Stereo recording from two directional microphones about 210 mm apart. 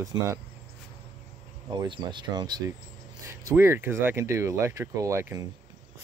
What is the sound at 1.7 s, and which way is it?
Speech, 20° right (ahead or behind).